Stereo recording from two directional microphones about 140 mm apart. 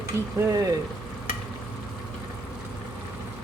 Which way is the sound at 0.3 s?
25° right (ahead or behind).